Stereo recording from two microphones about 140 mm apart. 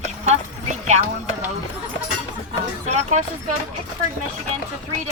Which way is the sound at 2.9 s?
55° right (ahead or behind).